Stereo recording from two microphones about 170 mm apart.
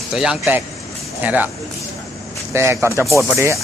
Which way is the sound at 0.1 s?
5° right (ahead or behind).